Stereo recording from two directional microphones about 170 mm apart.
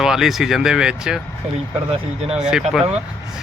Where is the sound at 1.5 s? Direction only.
40° right (ahead or behind).